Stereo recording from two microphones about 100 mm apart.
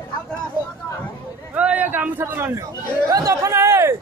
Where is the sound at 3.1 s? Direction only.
35° right (ahead or behind).